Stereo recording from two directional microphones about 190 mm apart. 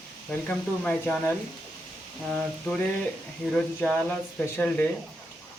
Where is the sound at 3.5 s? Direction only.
5° left (ahead or behind).